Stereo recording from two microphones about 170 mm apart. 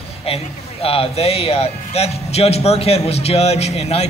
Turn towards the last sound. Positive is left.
turn(degrees=35)  # may be behind; listen again after turning